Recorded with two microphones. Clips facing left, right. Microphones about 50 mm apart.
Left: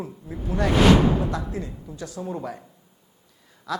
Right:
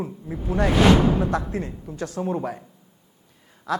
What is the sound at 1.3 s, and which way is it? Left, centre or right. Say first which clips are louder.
Speech: right 4 dB; right.